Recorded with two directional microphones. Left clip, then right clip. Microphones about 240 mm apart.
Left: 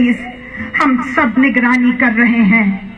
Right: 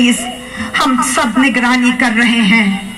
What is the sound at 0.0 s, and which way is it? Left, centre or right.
A woman's voice, right.